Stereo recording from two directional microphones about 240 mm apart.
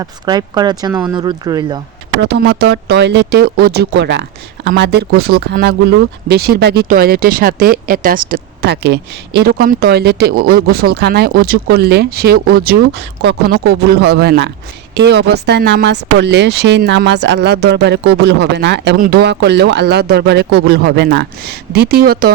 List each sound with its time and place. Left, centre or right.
0.0 s speech: centre
2.2 s speech: right